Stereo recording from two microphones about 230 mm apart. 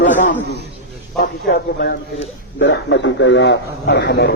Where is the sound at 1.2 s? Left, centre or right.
Left.